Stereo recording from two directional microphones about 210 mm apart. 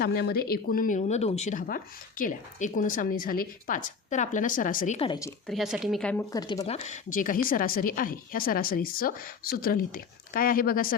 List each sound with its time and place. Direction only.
0.0 s speech: 50° left (ahead or behind)
4.9 s speech: 20° left (ahead or behind)
5.5 s speech: centre (ahead or behind)
6.3 s speech: 15° left (ahead or behind)
6.7 s a woman's voice: 30° left (ahead or behind)